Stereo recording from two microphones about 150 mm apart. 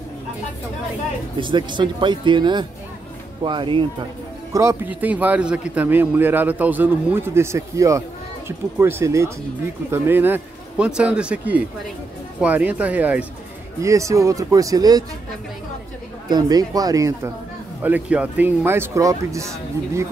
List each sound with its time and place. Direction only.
1.4 s speech: 30° right (ahead or behind)
4.5 s a man's voice: 20° right (ahead or behind)
16.3 s speech: 25° right (ahead or behind)
17.8 s a man's voice: 10° right (ahead or behind)